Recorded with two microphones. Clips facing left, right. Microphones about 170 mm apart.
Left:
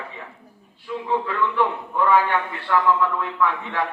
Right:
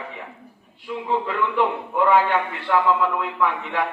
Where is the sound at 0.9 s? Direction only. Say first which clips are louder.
Even; 20° right (ahead or behind).